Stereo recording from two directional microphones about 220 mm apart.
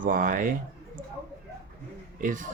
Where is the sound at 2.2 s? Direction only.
35° right (ahead or behind).